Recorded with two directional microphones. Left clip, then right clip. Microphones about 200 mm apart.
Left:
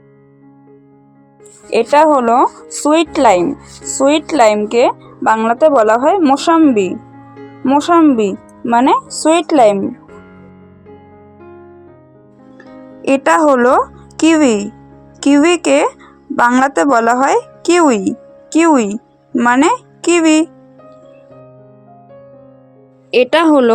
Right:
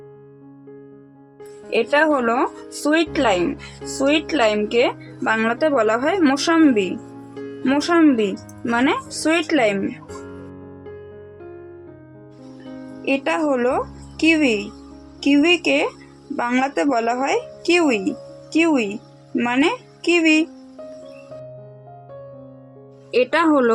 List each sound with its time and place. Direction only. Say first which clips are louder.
1.7 s speech: left 8 dB; 25° left (ahead or behind)
13.1 s a child's voice: left 10 dB; 30° left (ahead or behind)
23.1 s speech: left 7 dB; 25° left (ahead or behind)